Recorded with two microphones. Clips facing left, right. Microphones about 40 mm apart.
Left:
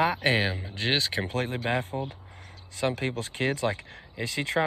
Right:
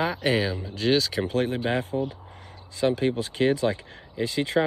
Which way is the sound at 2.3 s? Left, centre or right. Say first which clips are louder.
Right 2 dB; left.